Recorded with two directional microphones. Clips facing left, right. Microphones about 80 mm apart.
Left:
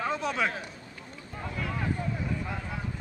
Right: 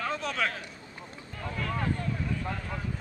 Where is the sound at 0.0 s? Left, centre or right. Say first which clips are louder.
Left 2 dB; centre.